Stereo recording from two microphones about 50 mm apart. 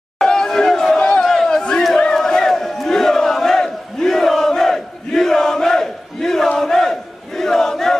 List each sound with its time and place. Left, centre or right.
0.2 s chatter: centre
1.3 s battle cry: centre